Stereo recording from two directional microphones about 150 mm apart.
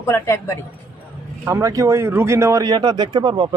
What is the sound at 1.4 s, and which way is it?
Speech, 20° right (ahead or behind).